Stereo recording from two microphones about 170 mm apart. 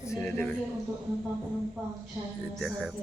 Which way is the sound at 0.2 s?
5° left (ahead or behind).